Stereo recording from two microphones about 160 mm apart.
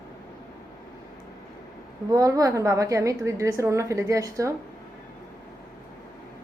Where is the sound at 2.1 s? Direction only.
20° right (ahead or behind).